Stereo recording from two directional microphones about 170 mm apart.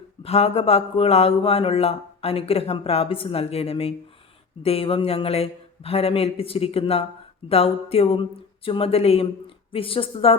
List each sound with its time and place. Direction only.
0.2 s speech: 35° left (ahead or behind)